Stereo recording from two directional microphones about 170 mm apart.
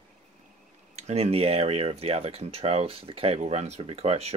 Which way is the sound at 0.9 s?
40° right (ahead or behind).